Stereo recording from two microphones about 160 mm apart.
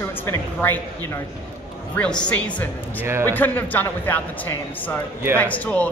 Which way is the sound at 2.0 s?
5° left (ahead or behind).